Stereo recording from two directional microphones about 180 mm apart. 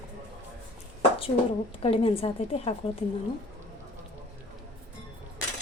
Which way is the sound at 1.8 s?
30° left (ahead or behind).